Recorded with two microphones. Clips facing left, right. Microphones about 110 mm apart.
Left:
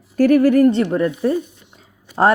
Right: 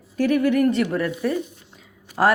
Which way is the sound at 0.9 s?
25° left (ahead or behind).